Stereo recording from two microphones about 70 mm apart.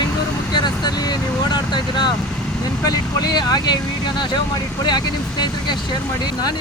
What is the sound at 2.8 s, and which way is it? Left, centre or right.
Speech, left.